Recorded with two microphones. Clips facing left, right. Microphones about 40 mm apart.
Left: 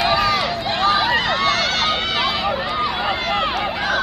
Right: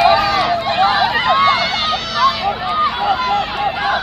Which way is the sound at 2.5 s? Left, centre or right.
Centre.